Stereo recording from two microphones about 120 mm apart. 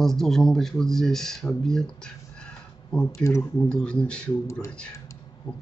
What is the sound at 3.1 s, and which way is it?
Speech, 25° left (ahead or behind).